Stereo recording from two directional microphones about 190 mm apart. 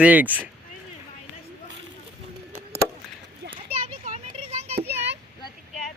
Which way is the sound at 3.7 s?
35° right (ahead or behind).